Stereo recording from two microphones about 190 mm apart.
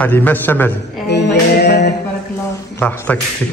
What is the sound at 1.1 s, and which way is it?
Music, 60° left (ahead or behind).